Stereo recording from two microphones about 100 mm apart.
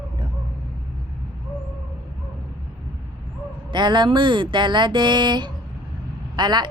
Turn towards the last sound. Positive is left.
turn(degrees=-45)  # may be behind; listen again after turning